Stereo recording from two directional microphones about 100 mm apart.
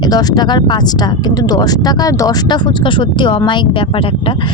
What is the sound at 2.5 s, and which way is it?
Speech, 55° left (ahead or behind).